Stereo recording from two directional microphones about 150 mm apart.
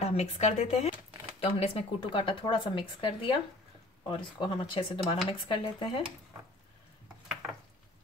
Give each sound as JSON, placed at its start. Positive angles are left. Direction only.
{"t": 0.0, "sound": "speech", "side_deg": 45}